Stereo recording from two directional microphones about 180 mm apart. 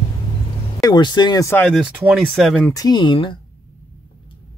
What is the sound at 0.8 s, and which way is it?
Speech, 25° left (ahead or behind).